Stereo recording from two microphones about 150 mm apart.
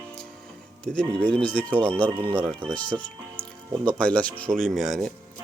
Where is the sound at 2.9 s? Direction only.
10° left (ahead or behind).